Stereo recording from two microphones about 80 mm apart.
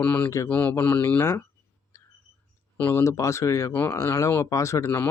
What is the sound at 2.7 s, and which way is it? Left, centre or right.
Speech, left.